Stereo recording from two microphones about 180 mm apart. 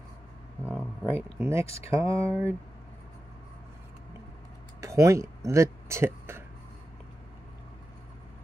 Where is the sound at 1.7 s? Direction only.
35° left (ahead or behind).